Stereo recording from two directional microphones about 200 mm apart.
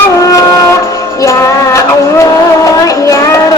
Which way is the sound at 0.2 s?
15° left (ahead or behind).